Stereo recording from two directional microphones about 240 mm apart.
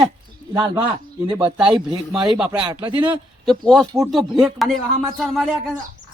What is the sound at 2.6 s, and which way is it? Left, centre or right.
Speech, centre.